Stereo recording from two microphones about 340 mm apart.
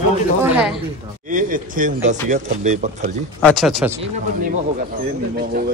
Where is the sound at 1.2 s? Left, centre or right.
Right.